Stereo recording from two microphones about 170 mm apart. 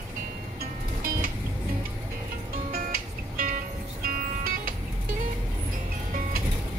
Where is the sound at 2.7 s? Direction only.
60° right (ahead or behind).